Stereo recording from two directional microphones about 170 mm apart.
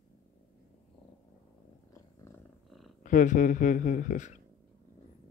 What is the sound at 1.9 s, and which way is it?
Purr, 15° left (ahead or behind).